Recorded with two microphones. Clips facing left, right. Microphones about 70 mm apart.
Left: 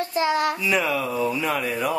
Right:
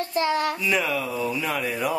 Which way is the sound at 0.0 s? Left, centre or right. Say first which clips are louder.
Left 1 dB; centre.